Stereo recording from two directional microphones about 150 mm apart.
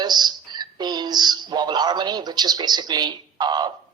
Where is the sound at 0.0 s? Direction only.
25° right (ahead or behind).